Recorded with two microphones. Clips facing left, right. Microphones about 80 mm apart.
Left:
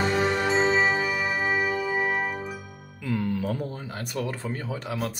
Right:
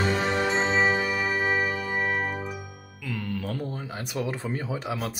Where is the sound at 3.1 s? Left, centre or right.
Centre.